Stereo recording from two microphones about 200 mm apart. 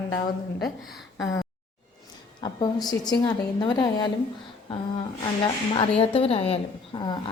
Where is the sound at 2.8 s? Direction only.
20° left (ahead or behind).